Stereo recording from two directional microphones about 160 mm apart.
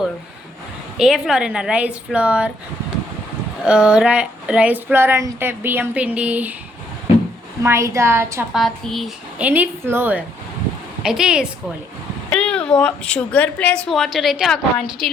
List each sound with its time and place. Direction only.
0.9 s speech: 5° right (ahead or behind)
3.7 s speech: 5° right (ahead or behind)
7.6 s speech: 15° right (ahead or behind)
8.5 s speech: centre (ahead or behind)
12.3 s a woman's voice: 5° left (ahead or behind)